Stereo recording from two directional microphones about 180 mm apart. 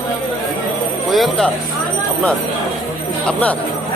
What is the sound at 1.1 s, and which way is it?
Speech, centre (ahead or behind).